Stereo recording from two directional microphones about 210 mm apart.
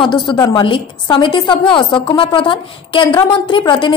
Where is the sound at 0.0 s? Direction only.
20° left (ahead or behind).